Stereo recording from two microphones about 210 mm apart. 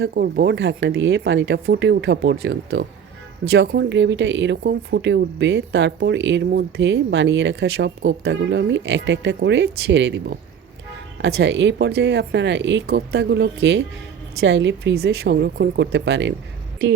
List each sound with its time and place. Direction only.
0.0 s speech: 50° right (ahead or behind)